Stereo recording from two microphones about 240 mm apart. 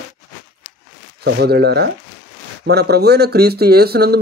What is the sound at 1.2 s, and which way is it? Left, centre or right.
Speech, right.